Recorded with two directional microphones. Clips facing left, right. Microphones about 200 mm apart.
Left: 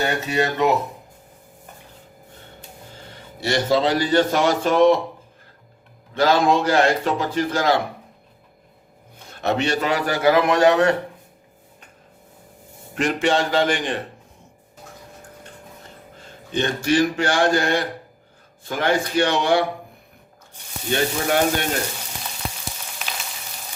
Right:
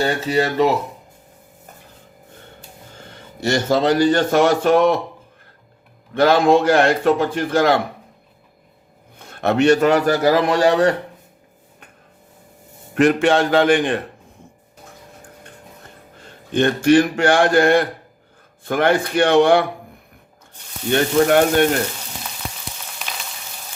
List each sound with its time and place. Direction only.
0.0 s speech: 30° right (ahead or behind)
3.1 s speech: 45° right (ahead or behind)
6.1 s a man's voice: 55° right (ahead or behind)
9.1 s speech: 55° right (ahead or behind); by 10.9 s 30° right (ahead or behind)
12.9 s a man's voice: 55° right (ahead or behind)
16.5 s a man's voice: 55° right (ahead or behind)
20.9 s speech: 55° right (ahead or behind)